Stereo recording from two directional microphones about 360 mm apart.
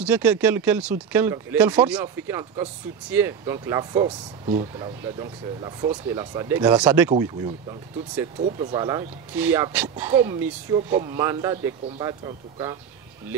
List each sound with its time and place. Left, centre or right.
0.0 s speech: centre
8.4 s speech: centre
8.7 s speech: centre